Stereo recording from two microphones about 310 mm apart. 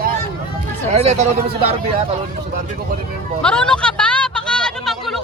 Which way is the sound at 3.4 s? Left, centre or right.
Centre.